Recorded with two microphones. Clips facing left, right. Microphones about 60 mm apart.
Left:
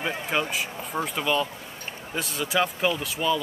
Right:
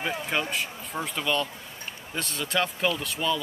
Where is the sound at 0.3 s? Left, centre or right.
Centre.